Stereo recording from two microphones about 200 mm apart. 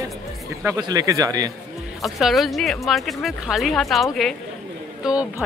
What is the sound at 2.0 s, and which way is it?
Speech, centre (ahead or behind).